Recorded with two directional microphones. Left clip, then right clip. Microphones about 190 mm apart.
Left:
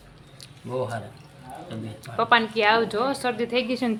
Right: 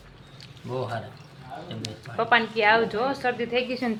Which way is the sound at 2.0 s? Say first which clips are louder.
Left 2 dB; 10° left (ahead or behind).